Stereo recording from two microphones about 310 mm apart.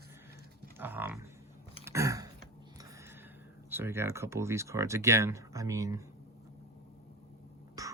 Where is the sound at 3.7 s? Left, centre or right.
Centre.